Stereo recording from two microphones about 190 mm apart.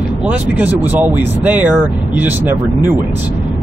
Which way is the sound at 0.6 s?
10° right (ahead or behind).